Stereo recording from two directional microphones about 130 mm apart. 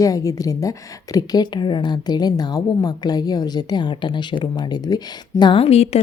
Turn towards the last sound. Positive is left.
turn(degrees=55)  # may be behind; listen again after turning